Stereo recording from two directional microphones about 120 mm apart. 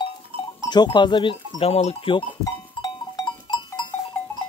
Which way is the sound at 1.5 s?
55° left (ahead or behind).